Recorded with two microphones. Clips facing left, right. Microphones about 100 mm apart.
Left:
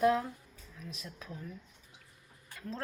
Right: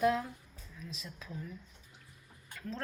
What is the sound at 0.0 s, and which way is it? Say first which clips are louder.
Speech: left 2 dB; 35° left (ahead or behind).